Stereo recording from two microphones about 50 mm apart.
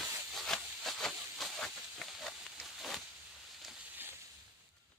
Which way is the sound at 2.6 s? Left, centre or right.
Centre.